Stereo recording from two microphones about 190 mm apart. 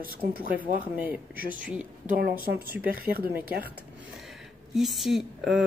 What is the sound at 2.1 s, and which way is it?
Speech, 50° right (ahead or behind).